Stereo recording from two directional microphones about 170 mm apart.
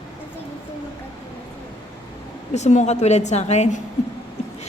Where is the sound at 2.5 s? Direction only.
45° left (ahead or behind).